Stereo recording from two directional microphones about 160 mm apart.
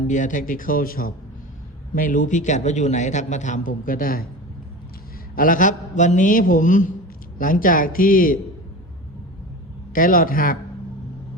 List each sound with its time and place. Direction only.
0.1 s a man's voice: 55° left (ahead or behind)
5.3 s a man's voice: 60° left (ahead or behind)
9.9 s a man's voice: 60° left (ahead or behind)